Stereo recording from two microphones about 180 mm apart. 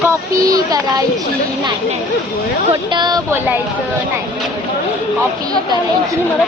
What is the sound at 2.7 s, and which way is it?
Speech, 25° right (ahead or behind).